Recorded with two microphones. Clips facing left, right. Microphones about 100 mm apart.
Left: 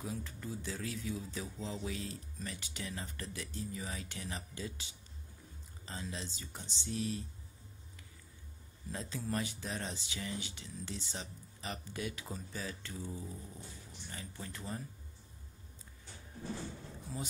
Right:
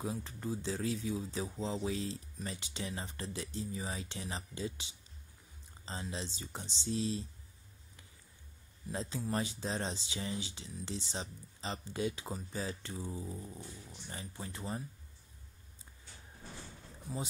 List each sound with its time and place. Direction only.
0.0 s speech: 30° right (ahead or behind)
5.9 s speech: 25° right (ahead or behind)
8.9 s speech: 25° right (ahead or behind)
17.1 s speech: 10° right (ahead or behind)